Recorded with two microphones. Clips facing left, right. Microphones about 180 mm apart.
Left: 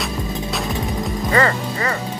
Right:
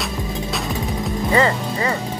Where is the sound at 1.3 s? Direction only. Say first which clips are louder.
Even; 15° right (ahead or behind).